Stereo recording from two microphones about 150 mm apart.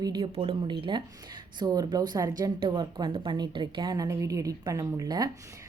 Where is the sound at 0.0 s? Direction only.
30° right (ahead or behind).